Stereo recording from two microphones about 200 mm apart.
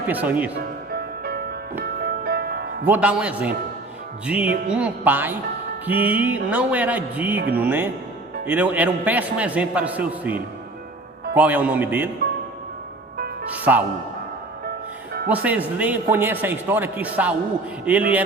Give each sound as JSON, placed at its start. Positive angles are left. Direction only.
{"t": 0.1, "sound": "a man's voice", "side_deg": -10}
{"t": 0.9, "sound": "music", "side_deg": -50}
{"t": 2.8, "sound": "a man's voice", "side_deg": -5}
{"t": 11.3, "sound": "a man's voice", "side_deg": -5}
{"t": 13.6, "sound": "a man's voice", "side_deg": -10}
{"t": 15.3, "sound": "a man's voice", "side_deg": -5}